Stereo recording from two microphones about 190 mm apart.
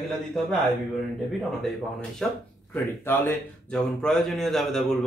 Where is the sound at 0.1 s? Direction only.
Centre (ahead or behind).